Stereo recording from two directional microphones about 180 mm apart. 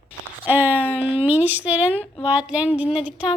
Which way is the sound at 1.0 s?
30° left (ahead or behind).